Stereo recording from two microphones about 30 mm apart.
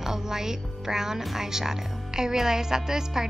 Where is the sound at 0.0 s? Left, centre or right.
Centre.